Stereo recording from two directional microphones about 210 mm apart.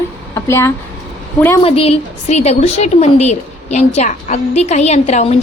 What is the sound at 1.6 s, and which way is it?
A woman's voice, 30° left (ahead or behind).